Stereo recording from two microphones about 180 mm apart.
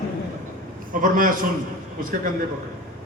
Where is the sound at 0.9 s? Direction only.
50° right (ahead or behind).